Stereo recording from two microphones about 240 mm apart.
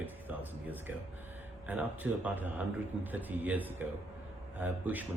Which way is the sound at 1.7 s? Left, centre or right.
Centre.